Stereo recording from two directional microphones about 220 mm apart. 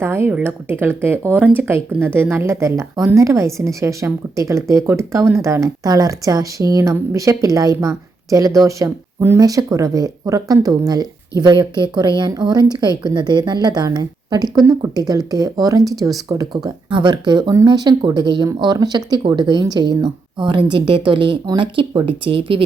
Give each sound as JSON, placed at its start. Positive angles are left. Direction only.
{"t": 0.0, "sound": "speech", "side_deg": -10}